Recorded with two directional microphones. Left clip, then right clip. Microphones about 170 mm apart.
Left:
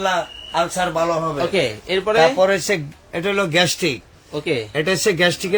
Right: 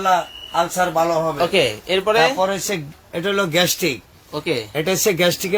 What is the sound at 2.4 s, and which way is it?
Speech, 35° left (ahead or behind).